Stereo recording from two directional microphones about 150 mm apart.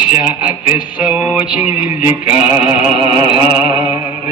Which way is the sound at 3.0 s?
35° right (ahead or behind).